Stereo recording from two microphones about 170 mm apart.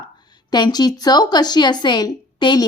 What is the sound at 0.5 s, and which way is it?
A woman's voice, 25° left (ahead or behind).